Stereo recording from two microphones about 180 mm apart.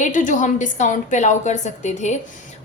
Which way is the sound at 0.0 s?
45° left (ahead or behind).